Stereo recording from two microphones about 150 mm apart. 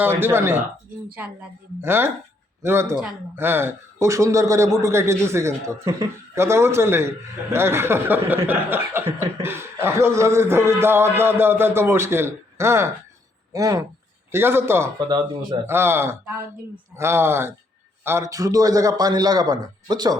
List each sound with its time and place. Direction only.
0.0 s a man's voice: 15° right (ahead or behind)
14.9 s a man's voice: 30° right (ahead or behind)
15.6 s a man's voice: 15° right (ahead or behind)